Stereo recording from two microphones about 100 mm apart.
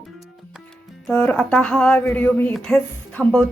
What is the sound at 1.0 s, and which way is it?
A woman's voice, 15° left (ahead or behind).